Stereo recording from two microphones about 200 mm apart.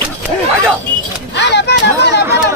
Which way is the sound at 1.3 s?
60° left (ahead or behind).